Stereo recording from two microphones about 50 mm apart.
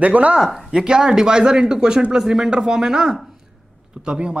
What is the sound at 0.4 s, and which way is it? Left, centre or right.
Speech, centre.